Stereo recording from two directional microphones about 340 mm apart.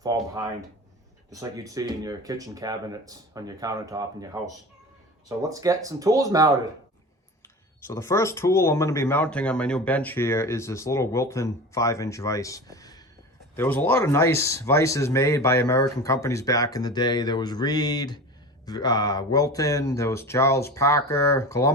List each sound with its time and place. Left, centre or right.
0.0 s speech: centre
7.9 s speech: centre